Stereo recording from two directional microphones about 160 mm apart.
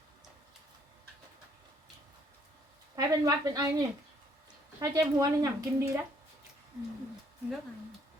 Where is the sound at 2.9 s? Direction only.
25° right (ahead or behind).